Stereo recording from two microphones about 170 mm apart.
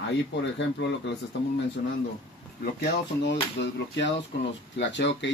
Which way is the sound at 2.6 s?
70° left (ahead or behind).